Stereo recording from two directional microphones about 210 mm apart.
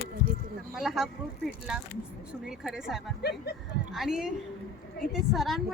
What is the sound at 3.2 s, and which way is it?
Speech, 50° left (ahead or behind).